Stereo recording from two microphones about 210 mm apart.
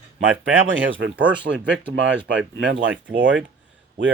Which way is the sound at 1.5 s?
60° right (ahead or behind).